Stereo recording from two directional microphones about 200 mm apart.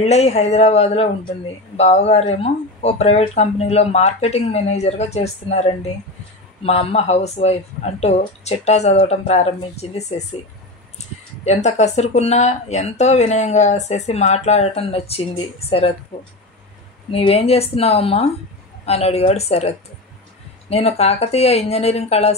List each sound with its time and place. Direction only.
0.0 s speech: 35° left (ahead or behind)
11.4 s speech: 35° left (ahead or behind)
17.1 s speech: 30° left (ahead or behind)
20.7 s speech: 30° left (ahead or behind)